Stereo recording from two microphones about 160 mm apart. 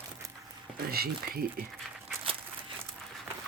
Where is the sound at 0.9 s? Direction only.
70° right (ahead or behind).